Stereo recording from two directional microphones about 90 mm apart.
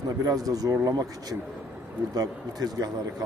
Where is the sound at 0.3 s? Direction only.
40° right (ahead or behind).